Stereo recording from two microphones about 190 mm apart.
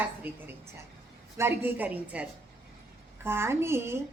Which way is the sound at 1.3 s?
10° right (ahead or behind).